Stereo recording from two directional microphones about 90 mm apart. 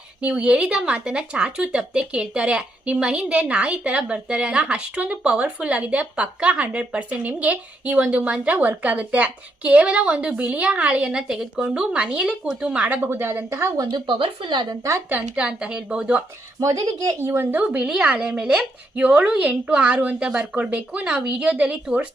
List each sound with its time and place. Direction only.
0.2 s speech: 15° right (ahead or behind); by 13.8 s 30° right (ahead or behind)
13.9 s speech: 65° right (ahead or behind)
15.1 s speech: 10° right (ahead or behind)
16.6 s speech: 40° right (ahead or behind)
17.2 s speech: 25° right (ahead or behind)